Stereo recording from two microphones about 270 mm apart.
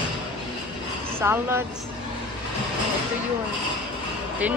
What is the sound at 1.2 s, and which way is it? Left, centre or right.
Speech, centre.